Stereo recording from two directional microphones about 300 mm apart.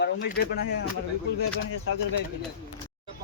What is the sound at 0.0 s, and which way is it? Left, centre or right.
Speech, left.